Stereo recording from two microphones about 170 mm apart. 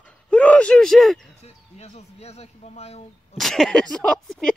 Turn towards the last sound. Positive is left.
turn(degrees=5)  # may be behind; listen again after turning